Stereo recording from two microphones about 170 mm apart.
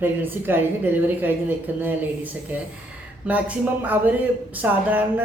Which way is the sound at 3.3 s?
10° right (ahead or behind).